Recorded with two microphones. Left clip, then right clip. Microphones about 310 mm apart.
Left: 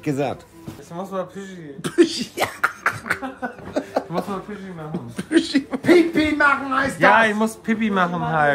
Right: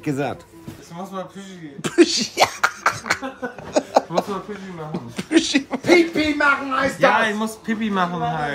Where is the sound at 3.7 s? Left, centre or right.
Centre.